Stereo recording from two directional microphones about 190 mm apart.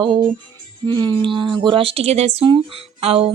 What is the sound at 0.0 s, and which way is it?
A woman's voice, 25° right (ahead or behind).